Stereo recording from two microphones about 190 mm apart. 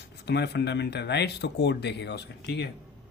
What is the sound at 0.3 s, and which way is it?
Speech, 60° left (ahead or behind).